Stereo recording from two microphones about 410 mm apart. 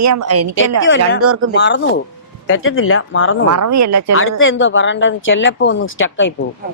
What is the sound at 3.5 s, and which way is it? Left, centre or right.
Speech, right.